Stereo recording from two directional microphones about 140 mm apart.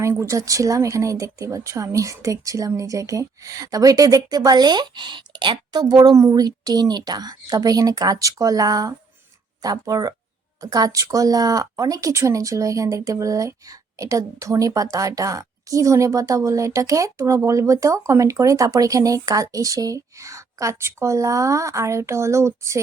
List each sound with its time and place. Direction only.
0.0 s speech: 20° right (ahead or behind)